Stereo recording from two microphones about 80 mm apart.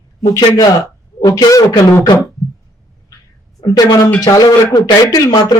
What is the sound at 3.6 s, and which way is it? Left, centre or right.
A man's voice, left.